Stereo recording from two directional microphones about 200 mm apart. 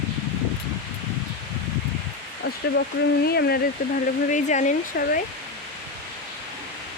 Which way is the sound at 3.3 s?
50° left (ahead or behind).